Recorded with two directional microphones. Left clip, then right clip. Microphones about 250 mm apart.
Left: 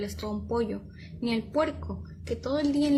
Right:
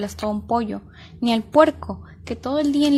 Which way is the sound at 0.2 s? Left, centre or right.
Right.